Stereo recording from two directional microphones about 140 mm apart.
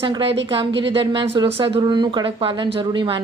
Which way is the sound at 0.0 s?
40° right (ahead or behind).